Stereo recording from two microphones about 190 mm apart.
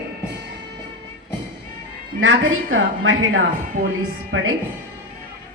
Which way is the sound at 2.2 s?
90° right.